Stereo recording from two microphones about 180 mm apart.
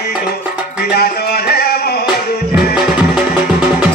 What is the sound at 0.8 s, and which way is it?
Music, 55° left (ahead or behind).